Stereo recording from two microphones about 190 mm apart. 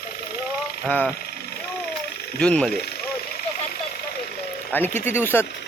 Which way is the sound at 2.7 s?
55° left (ahead or behind).